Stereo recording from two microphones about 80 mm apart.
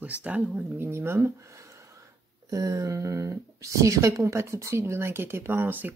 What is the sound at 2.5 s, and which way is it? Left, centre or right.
Speech, right.